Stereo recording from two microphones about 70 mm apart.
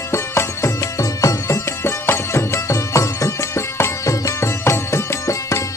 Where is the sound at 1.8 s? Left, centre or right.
Left.